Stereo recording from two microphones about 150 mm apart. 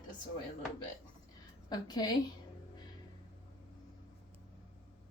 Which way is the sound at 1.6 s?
25° left (ahead or behind).